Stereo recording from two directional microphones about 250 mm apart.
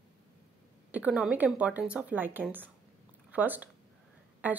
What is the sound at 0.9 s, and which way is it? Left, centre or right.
A woman's voice, centre.